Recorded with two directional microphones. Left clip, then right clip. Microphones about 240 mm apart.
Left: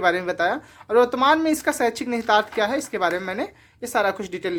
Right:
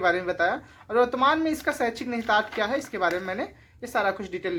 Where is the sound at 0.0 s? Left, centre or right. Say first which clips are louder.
Left 3 dB; left.